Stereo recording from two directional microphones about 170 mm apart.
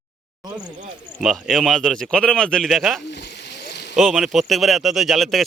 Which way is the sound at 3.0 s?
80° left.